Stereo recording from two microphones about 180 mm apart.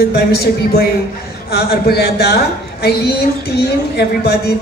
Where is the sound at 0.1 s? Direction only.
60° left (ahead or behind).